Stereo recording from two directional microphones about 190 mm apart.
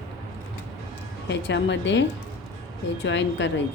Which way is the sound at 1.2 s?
65° left (ahead or behind).